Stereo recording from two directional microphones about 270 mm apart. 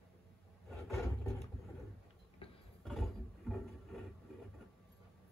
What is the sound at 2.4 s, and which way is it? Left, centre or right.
Tick-tock, left.